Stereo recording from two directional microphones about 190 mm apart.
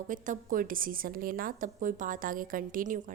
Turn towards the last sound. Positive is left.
turn(degrees=-45)  # may be behind; listen again after turning